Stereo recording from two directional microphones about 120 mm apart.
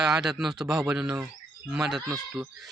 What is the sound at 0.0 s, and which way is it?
Speech, 5° right (ahead or behind).